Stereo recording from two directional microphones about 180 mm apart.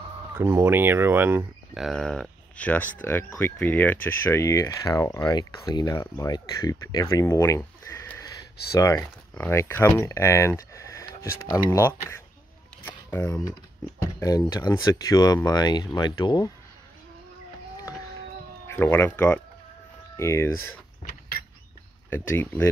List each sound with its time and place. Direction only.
0.3 s speech: 10° right (ahead or behind)
1.8 s speech: centre (ahead or behind); by 16.5 s 25° left (ahead or behind)
18.7 s speech: 10° left (ahead or behind)
22.1 s speech: 10° left (ahead or behind)